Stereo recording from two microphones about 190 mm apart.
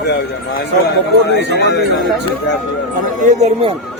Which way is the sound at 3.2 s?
40° right (ahead or behind).